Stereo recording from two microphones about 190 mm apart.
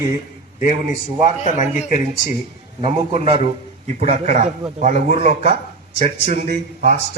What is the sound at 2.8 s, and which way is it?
A man's voice, 30° right (ahead or behind).